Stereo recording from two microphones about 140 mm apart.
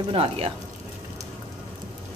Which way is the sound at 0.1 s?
40° right (ahead or behind).